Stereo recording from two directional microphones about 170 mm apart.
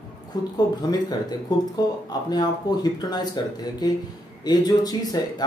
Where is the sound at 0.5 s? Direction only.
25° left (ahead or behind).